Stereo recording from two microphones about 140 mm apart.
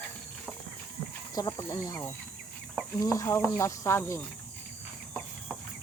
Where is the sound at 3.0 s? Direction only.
25° left (ahead or behind).